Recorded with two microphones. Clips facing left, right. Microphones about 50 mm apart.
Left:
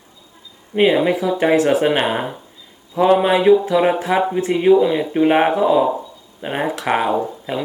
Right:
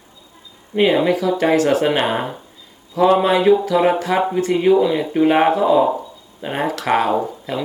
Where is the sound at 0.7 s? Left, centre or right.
Centre.